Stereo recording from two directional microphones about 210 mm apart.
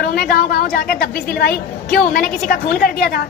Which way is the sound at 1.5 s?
5° left (ahead or behind).